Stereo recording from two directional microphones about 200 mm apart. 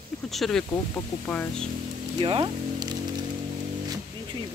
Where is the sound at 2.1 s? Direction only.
25° right (ahead or behind).